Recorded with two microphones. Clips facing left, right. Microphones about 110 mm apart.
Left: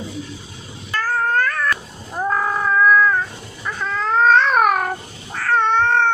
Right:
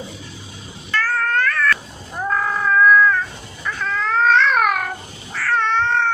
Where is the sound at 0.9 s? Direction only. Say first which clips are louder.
Left 1 dB; 15° left (ahead or behind).